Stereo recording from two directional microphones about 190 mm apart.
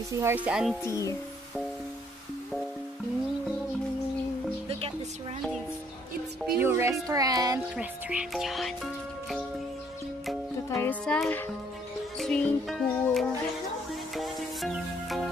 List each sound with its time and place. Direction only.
0.1 s speech: 15° right (ahead or behind)
0.8 s a child's voice: 15° left (ahead or behind)
6.6 s speech: 15° right (ahead or behind)
7.7 s speech: 5° right (ahead or behind)
10.7 s a child's voice: 10° left (ahead or behind)
12.2 s music: 5° left (ahead or behind)